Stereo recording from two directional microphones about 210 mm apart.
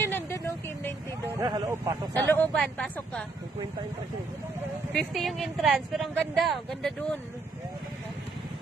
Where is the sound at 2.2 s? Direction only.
5° left (ahead or behind).